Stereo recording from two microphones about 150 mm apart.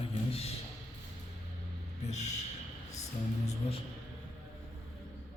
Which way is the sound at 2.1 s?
50° left (ahead or behind).